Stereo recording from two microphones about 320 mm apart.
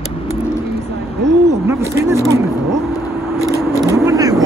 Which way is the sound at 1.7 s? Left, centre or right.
Centre.